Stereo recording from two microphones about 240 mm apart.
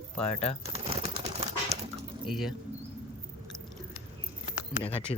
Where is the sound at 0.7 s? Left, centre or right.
Right.